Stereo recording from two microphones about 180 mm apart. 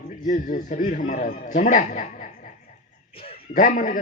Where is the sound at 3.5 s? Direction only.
45° left (ahead or behind).